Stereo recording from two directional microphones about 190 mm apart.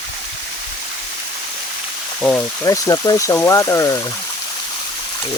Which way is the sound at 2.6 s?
20° left (ahead or behind).